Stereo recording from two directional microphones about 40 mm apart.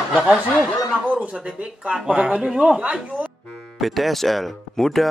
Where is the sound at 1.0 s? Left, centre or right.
Right.